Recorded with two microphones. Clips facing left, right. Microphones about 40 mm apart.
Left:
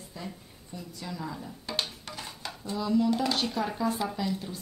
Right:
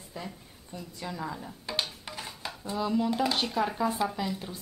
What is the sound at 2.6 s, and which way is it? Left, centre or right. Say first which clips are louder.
Speech: left 2 dB; centre.